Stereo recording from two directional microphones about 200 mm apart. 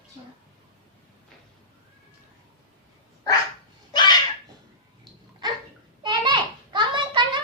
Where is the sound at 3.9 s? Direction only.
20° left (ahead or behind).